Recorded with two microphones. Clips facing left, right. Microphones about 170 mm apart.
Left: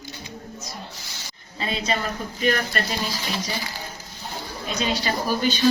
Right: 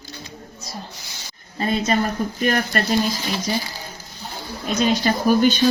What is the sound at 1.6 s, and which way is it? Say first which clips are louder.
Speech: right 6 dB; 50° right (ahead or behind).